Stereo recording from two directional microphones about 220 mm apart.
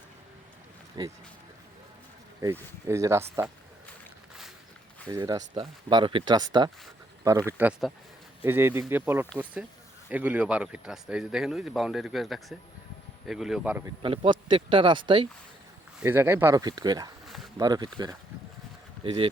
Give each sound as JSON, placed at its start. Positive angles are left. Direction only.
{"t": 1.0, "sound": "speech", "side_deg": -20}
{"t": 2.4, "sound": "speech", "side_deg": -10}
{"t": 5.1, "sound": "speech", "side_deg": -15}
{"t": 14.0, "sound": "speech", "side_deg": -25}
{"t": 16.0, "sound": "speech", "side_deg": -10}
{"t": 17.2, "sound": "a sound", "side_deg": 0}
{"t": 17.6, "sound": "speech", "side_deg": -20}